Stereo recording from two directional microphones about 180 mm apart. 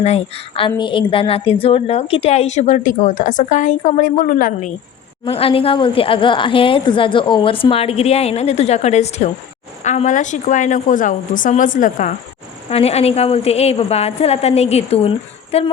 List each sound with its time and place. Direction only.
0.0 s a woman's voice: 35° left (ahead or behind)
5.2 s a woman's voice: 30° left (ahead or behind)
12.7 s a woman's voice: 35° left (ahead or behind)